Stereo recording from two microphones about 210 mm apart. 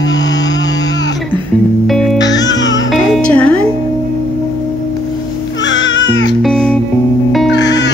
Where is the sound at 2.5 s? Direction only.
60° left (ahead or behind).